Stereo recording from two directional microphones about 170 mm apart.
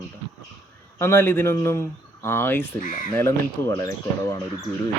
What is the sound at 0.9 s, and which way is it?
A man's voice, 15° left (ahead or behind).